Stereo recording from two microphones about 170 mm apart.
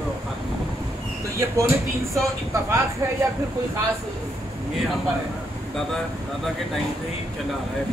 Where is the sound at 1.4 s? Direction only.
15° right (ahead or behind).